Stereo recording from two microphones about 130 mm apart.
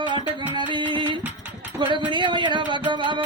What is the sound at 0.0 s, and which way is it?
Music, 35° right (ahead or behind).